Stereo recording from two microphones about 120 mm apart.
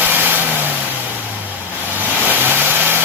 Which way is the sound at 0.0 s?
15° right (ahead or behind).